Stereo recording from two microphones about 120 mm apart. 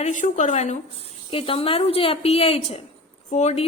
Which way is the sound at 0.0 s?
90° left.